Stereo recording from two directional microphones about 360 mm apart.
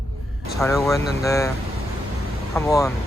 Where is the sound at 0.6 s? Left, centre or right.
Centre.